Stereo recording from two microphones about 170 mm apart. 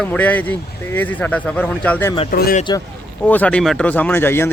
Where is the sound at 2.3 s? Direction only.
60° left (ahead or behind).